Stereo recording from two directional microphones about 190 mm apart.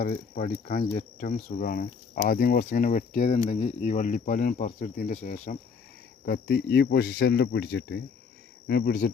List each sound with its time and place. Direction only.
0.0 s speech: 45° left (ahead or behind)
6.2 s speech: 60° left (ahead or behind)